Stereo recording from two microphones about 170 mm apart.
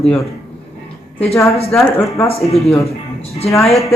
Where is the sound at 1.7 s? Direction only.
15° left (ahead or behind).